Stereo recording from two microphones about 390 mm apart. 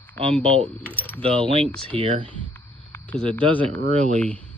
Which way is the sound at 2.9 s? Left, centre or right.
Centre.